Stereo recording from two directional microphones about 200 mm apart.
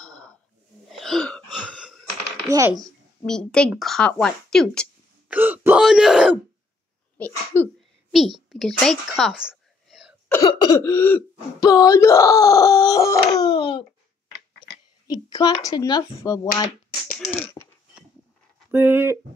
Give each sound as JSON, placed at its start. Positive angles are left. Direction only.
{"t": 0.0, "sound": "a sound", "side_deg": 5}
{"t": 0.8, "sound": "gasp", "side_deg": 0}
{"t": 2.4, "sound": "speech", "side_deg": -15}
{"t": 2.8, "sound": "speech", "side_deg": 5}
{"t": 5.3, "sound": "speech", "side_deg": -10}
{"t": 7.2, "sound": "speech", "side_deg": 10}
{"t": 8.5, "sound": "whispering", "side_deg": 0}
{"t": 10.3, "sound": "speech", "side_deg": 20}
{"t": 13.4, "sound": "dog", "side_deg": 25}
{"t": 14.6, "sound": "a woman's voice", "side_deg": 20}
{"t": 18.7, "sound": "speech", "side_deg": -10}